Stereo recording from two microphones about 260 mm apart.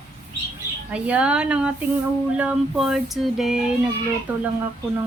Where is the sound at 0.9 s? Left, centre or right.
Centre.